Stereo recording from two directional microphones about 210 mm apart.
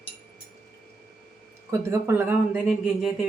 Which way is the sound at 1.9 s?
10° right (ahead or behind).